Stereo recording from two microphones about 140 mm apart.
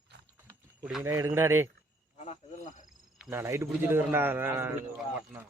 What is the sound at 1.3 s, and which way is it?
Speech, 20° right (ahead or behind).